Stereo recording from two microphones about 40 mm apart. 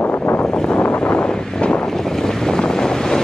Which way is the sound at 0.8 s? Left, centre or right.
Left.